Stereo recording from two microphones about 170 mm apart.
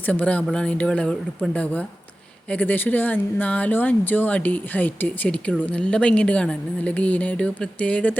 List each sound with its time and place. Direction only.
0.0 s speech: 10° left (ahead or behind)
2.5 s speech: 10° left (ahead or behind)